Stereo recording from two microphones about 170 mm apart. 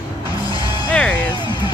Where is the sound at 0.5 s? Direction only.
25° left (ahead or behind).